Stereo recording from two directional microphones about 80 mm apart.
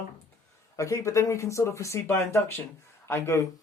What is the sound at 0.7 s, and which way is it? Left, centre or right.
Speech, left.